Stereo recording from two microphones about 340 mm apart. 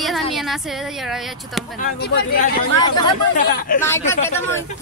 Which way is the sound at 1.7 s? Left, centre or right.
Left.